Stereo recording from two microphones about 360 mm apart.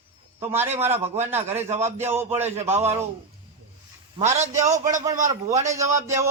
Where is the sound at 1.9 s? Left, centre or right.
Centre.